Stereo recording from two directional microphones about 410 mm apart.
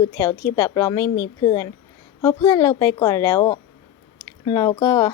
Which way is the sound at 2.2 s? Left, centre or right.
Centre.